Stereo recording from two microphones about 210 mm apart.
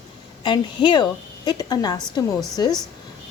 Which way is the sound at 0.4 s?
20° left (ahead or behind).